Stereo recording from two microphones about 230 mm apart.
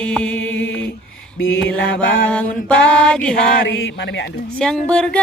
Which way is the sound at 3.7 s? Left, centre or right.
Left.